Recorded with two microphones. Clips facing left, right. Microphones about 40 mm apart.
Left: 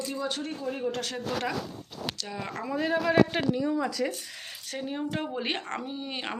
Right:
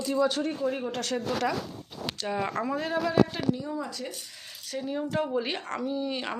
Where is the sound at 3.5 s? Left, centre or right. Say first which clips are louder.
Left 6 dB; left.